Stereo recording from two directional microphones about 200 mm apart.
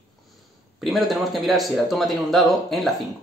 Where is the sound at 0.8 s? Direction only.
Centre (ahead or behind).